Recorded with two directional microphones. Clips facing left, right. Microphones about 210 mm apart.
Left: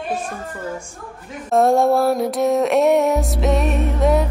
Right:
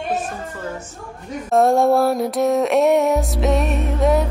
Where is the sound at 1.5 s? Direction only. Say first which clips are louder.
Even; centre (ahead or behind).